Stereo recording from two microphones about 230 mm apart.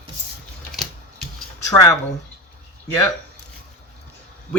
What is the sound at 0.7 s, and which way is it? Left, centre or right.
Typewriter, centre.